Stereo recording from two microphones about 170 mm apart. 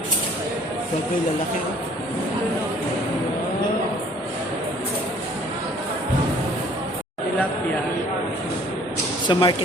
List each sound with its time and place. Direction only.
9.2 s speech: 25° left (ahead or behind)